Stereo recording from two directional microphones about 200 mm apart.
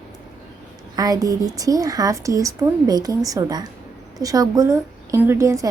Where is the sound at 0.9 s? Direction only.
20° right (ahead or behind).